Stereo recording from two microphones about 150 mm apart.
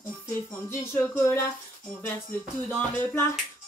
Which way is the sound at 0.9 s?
15° left (ahead or behind).